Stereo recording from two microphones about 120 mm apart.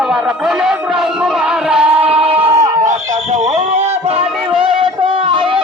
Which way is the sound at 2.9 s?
70° right (ahead or behind).